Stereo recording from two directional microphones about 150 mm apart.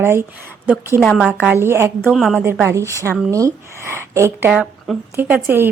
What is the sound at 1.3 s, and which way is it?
Speech, 10° right (ahead or behind).